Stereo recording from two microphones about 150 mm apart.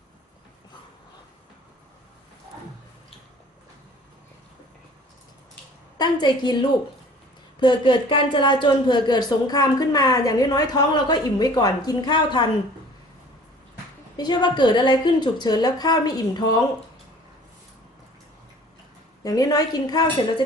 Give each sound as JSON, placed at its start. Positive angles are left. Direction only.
{"t": 6.0, "sound": "speech", "side_deg": 30}
{"t": 14.2, "sound": "speech", "side_deg": 30}
{"t": 19.2, "sound": "speech", "side_deg": 25}